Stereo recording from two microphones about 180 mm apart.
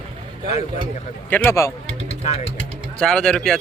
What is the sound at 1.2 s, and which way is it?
Speech, 10° left (ahead or behind).